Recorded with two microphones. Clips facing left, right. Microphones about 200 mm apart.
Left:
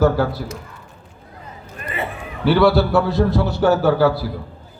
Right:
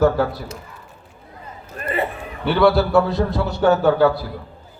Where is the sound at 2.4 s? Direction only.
Centre (ahead or behind).